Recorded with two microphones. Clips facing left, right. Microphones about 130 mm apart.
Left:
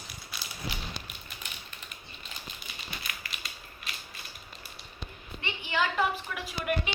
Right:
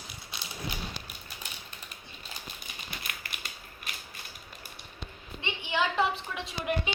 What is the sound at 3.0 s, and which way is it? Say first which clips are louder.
Typewriter: even; 55° right (ahead or behind).